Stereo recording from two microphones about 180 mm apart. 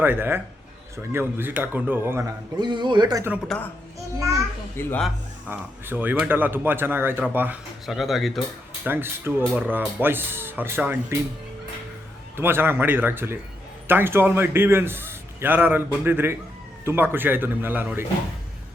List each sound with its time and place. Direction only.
0.0 s speech: 10° right (ahead or behind)
2.6 s speech: 25° right (ahead or behind)
4.8 s a man's voice: 10° left (ahead or behind)
5.5 s speech: 10° right (ahead or behind)
8.8 s speech: 10° right (ahead or behind)
12.4 s speech: 10° right (ahead or behind)